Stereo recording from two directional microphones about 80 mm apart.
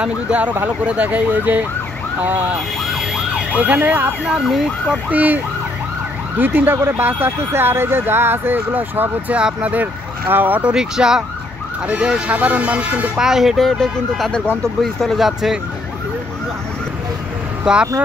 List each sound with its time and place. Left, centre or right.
0.0 s speech: centre
3.5 s speech: centre
4.3 s speech: centre
5.1 s speech: right
10.7 s speech: centre
13.3 s speech: centre
17.7 s speech: centre